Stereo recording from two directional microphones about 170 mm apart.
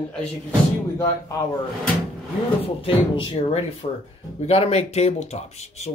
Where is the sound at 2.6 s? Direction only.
30° left (ahead or behind).